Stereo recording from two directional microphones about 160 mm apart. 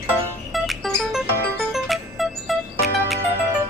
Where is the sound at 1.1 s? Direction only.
Centre (ahead or behind).